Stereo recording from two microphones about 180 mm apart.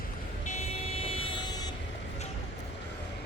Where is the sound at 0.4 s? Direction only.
35° left (ahead or behind).